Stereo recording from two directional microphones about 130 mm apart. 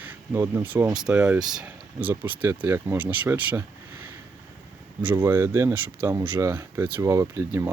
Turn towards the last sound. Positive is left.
turn(degrees=-20)  # may be behind; listen again after turning